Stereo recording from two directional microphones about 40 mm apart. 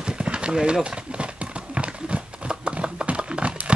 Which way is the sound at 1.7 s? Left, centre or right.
Right.